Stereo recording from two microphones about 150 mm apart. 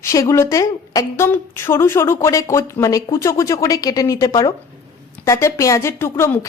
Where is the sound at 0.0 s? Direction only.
20° left (ahead or behind).